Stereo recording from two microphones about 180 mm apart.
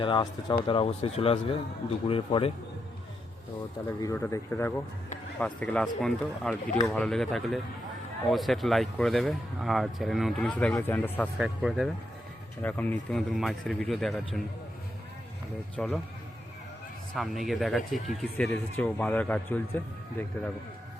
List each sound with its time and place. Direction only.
0.0 s speech: 25° left (ahead or behind)
3.8 s speech: 15° left (ahead or behind)
11.3 s speech: 5° right (ahead or behind)
12.6 s speech: 10° left (ahead or behind)
15.7 s speech: 5° left (ahead or behind)
17.2 s speech: centre (ahead or behind)